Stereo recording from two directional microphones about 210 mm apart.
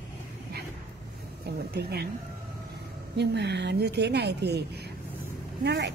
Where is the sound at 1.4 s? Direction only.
50° right (ahead or behind).